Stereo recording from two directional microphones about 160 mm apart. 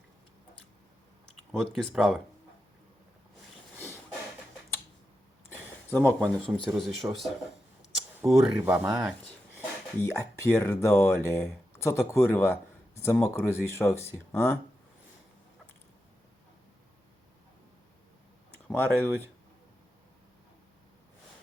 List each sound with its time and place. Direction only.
1.5 s speech: centre (ahead or behind)
6.0 s speech: centre (ahead or behind)
8.2 s speech: 10° right (ahead or behind)
9.0 s speech: centre (ahead or behind)
9.6 s speech: 15° left (ahead or behind)
18.7 s speech: 10° left (ahead or behind)